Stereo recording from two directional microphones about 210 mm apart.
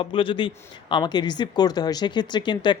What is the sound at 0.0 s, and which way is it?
Speech, 25° left (ahead or behind).